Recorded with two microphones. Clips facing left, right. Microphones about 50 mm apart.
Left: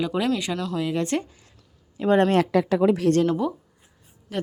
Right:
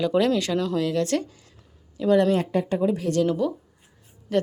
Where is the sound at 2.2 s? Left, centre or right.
Left.